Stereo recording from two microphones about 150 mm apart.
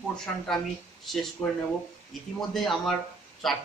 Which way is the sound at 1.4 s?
15° left (ahead or behind).